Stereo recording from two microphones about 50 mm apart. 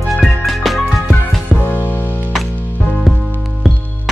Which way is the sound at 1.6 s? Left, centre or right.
Left.